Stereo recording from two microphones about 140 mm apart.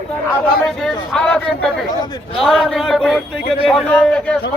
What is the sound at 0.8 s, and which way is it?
A man's voice, 5° left (ahead or behind).